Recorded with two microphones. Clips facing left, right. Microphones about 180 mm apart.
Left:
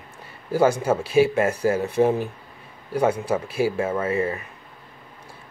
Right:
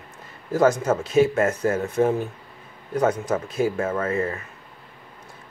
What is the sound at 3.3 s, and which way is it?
Speech, 10° left (ahead or behind).